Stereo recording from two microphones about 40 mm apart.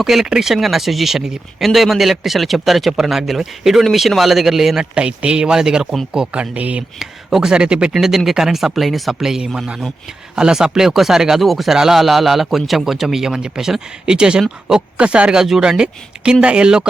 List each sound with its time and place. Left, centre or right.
0.0 s speech: centre
4.8 s speech: right
6.1 s speech: right
7.0 s speech: centre
7.5 s speech: right
7.9 s speech: centre
9.1 s speech: centre
15.4 s speech: centre